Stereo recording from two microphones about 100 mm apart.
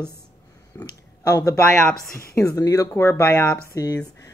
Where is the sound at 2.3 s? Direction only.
35° left (ahead or behind).